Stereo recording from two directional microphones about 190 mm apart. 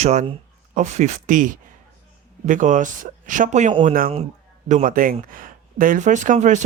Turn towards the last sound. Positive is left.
turn(degrees=-40)  # may be behind; listen again after turning